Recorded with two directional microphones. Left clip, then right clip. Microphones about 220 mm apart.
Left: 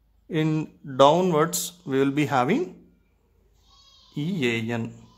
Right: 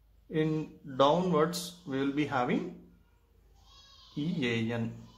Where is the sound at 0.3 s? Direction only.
40° left (ahead or behind).